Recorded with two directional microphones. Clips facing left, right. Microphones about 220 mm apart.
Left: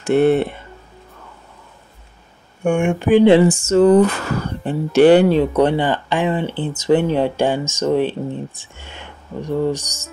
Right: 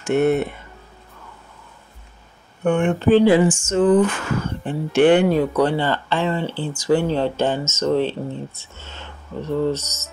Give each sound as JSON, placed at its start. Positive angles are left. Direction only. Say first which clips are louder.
{"t": 0.0, "sound": "speech", "louder": "left 3 dB", "side_deg": 30}
{"t": 2.6, "sound": "speech", "louder": "even", "side_deg": 10}
{"t": 3.3, "sound": "speech", "louder": "left 4 dB", "side_deg": 35}